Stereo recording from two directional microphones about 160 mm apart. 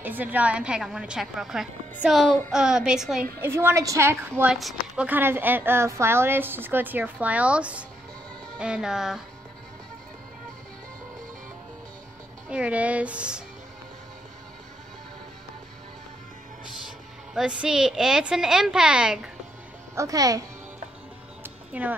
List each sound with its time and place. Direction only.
0.0 s a woman's voice: 10° right (ahead or behind)
3.3 s speech: 15° right (ahead or behind)
4.5 s a woman's voice: 5° right (ahead or behind)
12.4 s speech: 5° right (ahead or behind)
17.3 s a woman's voice: 5° right (ahead or behind)
20.0 s speech: 20° right (ahead or behind)
21.4 s music: 10° right (ahead or behind)